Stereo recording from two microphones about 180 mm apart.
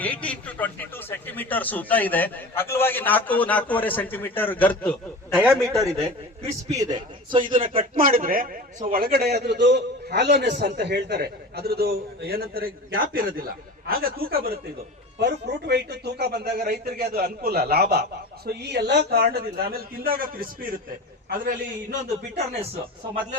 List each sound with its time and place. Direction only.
0.0 s a man's voice: 10° left (ahead or behind)
5.3 s a man's voice: 10° right (ahead or behind); by 7.9 s 30° right (ahead or behind)
7.9 s a man's voice: 50° right (ahead or behind)
15.2 s a man's voice: 65° right (ahead or behind)
22.5 s speech: 35° right (ahead or behind)